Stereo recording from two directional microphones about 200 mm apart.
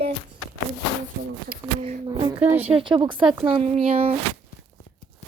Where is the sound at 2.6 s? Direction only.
30° right (ahead or behind).